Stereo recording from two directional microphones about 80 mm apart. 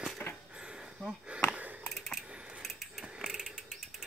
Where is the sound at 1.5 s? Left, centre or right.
Centre.